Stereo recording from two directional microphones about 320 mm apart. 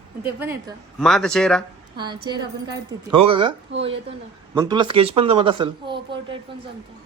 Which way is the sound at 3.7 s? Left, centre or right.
Right.